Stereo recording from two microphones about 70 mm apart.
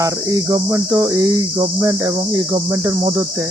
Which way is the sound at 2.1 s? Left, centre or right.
Right.